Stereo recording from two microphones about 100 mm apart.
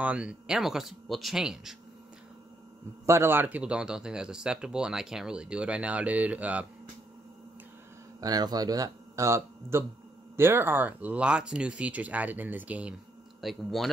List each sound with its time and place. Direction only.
0.0 s speech: 10° right (ahead or behind)
3.1 s speech: 25° right (ahead or behind)
8.2 s speech: 40° right (ahead or behind); by 12.9 s 15° right (ahead or behind)
13.4 s speech: centre (ahead or behind)